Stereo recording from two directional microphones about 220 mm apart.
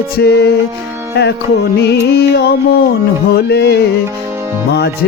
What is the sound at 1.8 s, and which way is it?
Music, 50° left (ahead or behind).